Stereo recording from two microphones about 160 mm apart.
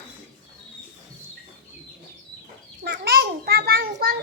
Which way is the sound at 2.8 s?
80° right.